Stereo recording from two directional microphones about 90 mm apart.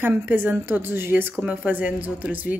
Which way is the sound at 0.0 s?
25° right (ahead or behind).